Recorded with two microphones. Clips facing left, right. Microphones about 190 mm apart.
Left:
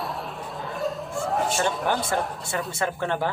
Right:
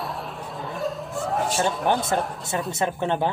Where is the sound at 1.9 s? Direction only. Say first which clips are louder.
Right 3 dB; 20° right (ahead or behind).